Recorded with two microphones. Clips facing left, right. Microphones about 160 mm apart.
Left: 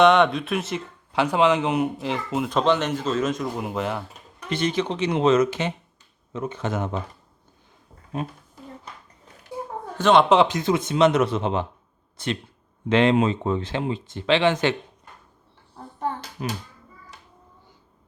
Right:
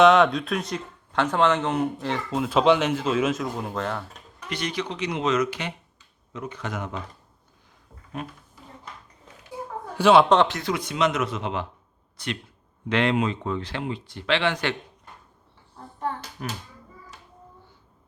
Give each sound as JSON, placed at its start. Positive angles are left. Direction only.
{"t": 0.0, "sound": "speech", "side_deg": 0}
{"t": 2.5, "sound": "speech", "side_deg": -10}
{"t": 3.6, "sound": "speech", "side_deg": 10}
{"t": 4.4, "sound": "speech", "side_deg": 25}
{"t": 10.0, "sound": "speech", "side_deg": -5}
{"t": 10.2, "sound": "speech", "side_deg": 15}
{"t": 16.0, "sound": "a child's voice", "side_deg": 20}